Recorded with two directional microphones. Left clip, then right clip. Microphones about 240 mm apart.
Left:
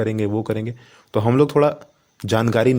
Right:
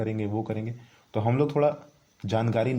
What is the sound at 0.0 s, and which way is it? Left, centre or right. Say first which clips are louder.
Speech: left 8 dB; left.